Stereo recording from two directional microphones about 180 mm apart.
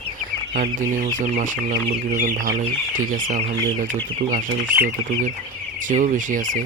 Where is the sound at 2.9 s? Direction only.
45° right (ahead or behind).